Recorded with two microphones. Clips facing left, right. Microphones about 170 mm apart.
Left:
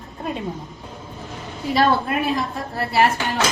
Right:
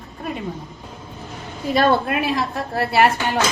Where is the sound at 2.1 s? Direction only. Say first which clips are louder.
Right 1 dB; 70° right (ahead or behind).